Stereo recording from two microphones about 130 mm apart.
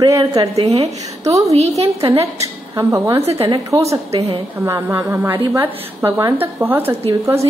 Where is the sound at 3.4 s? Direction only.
25° right (ahead or behind).